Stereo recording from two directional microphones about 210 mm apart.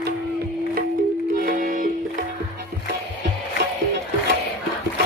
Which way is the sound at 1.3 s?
40° right (ahead or behind).